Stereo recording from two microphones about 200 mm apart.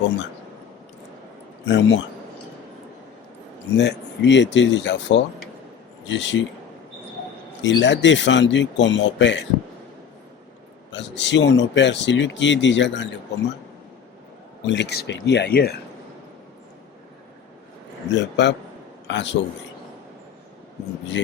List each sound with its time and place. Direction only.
1.6 s speech: 65° left (ahead or behind)
3.8 s speech: 60° left (ahead or behind)
7.6 s speech: 65° left (ahead or behind)
10.9 s speech: 60° left (ahead or behind)
14.7 s speech: 60° left (ahead or behind)
18.1 s a man's voice: 60° left (ahead or behind)